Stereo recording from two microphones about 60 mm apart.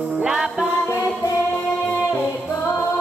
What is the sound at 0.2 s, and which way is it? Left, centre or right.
Music, centre.